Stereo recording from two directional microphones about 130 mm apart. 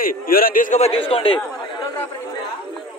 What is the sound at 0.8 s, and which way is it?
Speech, 45° left (ahead or behind).